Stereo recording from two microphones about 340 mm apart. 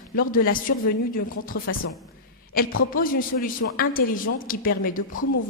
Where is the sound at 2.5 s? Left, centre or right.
Left.